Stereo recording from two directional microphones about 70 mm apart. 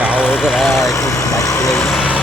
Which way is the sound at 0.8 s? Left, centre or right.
Left.